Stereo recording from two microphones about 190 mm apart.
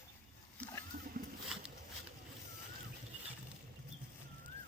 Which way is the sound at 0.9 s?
45° right (ahead or behind).